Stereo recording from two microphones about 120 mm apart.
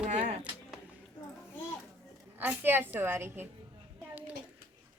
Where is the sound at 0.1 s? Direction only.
75° right (ahead or behind).